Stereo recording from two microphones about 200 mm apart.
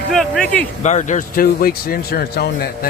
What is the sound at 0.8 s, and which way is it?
Speech, 35° left (ahead or behind).